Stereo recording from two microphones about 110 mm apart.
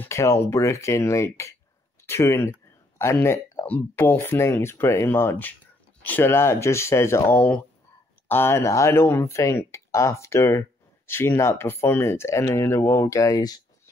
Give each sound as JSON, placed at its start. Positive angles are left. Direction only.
{"t": 0.0, "sound": "speech", "side_deg": 25}